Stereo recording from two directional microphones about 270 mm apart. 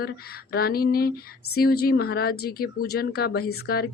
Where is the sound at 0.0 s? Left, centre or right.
Left.